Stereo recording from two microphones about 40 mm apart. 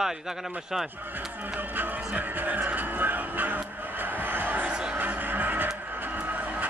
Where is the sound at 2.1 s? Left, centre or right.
Right.